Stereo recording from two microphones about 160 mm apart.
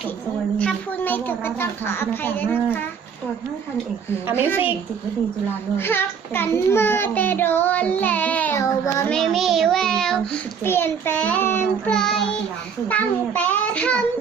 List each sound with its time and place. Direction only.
0.6 s a child's voice: 10° left (ahead or behind)
5.7 s a child's voice: 15° left (ahead or behind)
9.0 s a child's voice: centre (ahead or behind)